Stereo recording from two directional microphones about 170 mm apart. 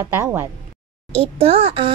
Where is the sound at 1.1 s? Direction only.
35° right (ahead or behind).